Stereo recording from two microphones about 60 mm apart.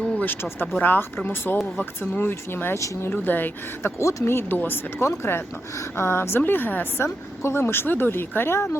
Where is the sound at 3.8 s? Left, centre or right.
Left.